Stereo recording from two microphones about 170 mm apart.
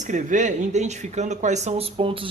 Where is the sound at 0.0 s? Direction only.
50° right (ahead or behind).